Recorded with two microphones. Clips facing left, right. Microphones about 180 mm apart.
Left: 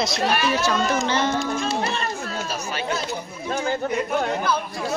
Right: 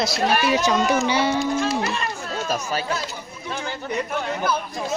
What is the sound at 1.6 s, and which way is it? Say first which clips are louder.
Speech: right 2 dB; 25° left (ahead or behind).